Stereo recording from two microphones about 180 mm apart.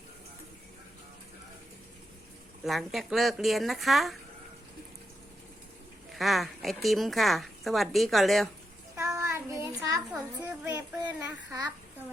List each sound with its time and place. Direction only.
2.6 s speech: centre (ahead or behind)
6.1 s speech: centre (ahead or behind)
9.0 s child singing: 15° right (ahead or behind)
10.1 s a child's voice: 10° right (ahead or behind)